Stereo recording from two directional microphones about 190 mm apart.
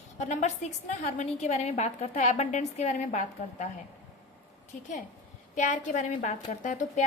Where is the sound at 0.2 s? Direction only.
40° left (ahead or behind).